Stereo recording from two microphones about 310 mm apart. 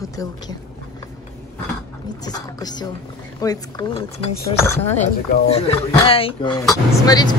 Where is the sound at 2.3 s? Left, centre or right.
Centre.